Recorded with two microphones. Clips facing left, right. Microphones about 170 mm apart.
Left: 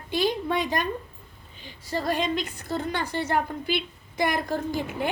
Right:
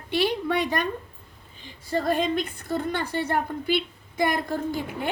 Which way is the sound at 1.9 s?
50° right (ahead or behind).